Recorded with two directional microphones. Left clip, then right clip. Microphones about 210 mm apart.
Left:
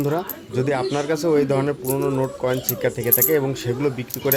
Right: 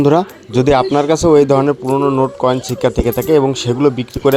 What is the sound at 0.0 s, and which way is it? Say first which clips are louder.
Speech: right 11 dB; 40° right (ahead or behind).